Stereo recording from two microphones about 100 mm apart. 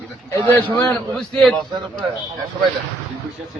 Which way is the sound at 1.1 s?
5° left (ahead or behind).